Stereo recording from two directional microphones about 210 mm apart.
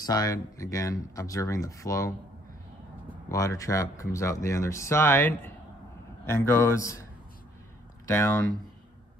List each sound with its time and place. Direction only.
0.0 s speech: 20° left (ahead or behind)
3.3 s speech: 15° left (ahead or behind)
8.1 s speech: 15° left (ahead or behind)